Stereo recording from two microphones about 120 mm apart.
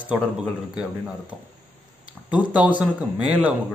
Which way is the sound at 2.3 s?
10° right (ahead or behind).